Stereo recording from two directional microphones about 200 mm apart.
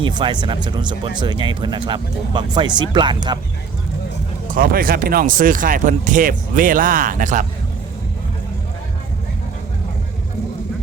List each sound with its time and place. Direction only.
0.0 s speech: 20° right (ahead or behind)
4.4 s speech: 45° right (ahead or behind)